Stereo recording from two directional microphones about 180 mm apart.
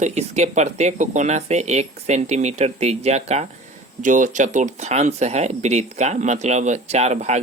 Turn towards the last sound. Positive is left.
turn(degrees=-40)  # may be behind; listen again after turning